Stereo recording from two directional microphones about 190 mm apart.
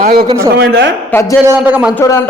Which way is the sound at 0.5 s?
65° right (ahead or behind).